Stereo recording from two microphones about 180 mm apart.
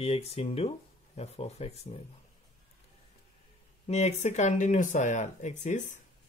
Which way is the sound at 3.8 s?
35° left (ahead or behind).